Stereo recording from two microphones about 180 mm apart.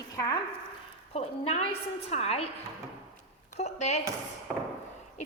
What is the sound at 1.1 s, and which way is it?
A woman's voice, 35° left (ahead or behind).